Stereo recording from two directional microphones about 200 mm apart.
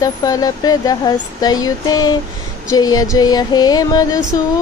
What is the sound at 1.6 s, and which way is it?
Speech, 20° left (ahead or behind).